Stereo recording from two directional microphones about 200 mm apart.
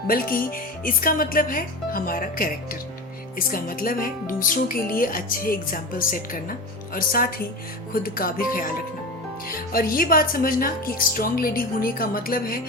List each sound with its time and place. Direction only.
0.1 s speech: 45° left (ahead or behind)